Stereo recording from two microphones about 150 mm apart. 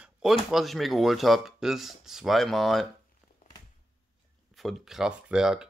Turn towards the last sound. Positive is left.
turn(degrees=-5)  # may be behind; listen again after turning